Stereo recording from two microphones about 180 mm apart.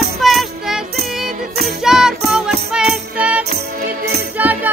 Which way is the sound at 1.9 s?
5° right (ahead or behind).